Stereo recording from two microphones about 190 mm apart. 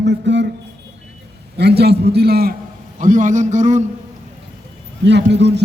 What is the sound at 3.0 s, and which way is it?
Speech, 45° right (ahead or behind).